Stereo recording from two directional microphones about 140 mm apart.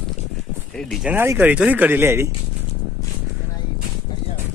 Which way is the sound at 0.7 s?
5° left (ahead or behind).